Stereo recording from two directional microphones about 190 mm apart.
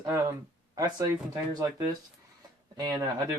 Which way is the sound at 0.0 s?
15° right (ahead or behind).